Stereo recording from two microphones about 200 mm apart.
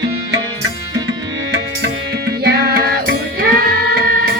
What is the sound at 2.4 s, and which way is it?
Music, 55° right (ahead or behind).